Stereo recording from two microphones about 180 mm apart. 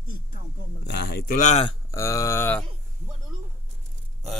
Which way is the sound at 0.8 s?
65° left (ahead or behind).